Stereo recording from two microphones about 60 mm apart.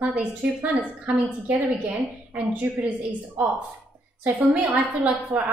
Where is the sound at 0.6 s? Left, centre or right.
Right.